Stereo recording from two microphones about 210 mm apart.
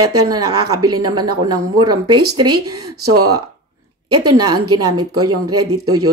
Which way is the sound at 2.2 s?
90° right.